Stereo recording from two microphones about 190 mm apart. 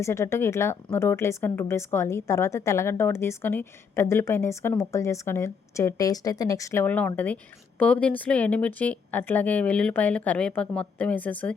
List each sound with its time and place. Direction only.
0.0 s speech: 15° left (ahead or behind)